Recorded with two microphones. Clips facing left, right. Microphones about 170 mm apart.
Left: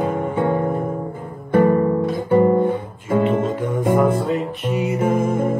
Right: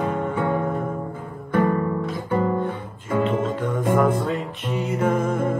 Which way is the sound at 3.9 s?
5° left (ahead or behind).